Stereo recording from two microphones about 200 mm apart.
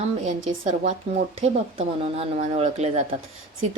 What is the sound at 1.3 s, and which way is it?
A woman's voice, 30° right (ahead or behind).